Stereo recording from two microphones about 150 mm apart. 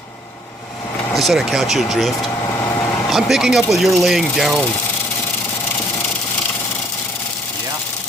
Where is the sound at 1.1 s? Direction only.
Centre (ahead or behind).